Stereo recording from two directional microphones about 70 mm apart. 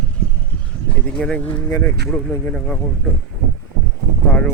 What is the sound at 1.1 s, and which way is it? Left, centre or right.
Speech, centre.